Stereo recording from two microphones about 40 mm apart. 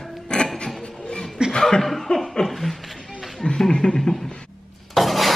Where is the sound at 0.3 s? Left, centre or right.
Left.